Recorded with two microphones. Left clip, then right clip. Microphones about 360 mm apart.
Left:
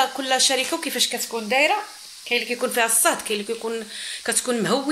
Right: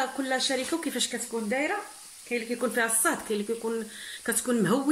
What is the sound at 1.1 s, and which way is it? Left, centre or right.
Speech, left.